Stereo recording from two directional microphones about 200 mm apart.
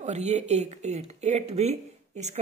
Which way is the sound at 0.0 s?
35° right (ahead or behind).